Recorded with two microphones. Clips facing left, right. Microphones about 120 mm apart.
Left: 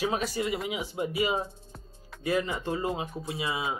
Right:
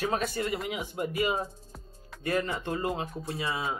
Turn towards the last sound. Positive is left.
turn(degrees=0)  # may be behind; listen again after turning